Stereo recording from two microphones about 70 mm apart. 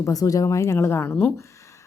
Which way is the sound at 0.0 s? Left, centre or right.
Left.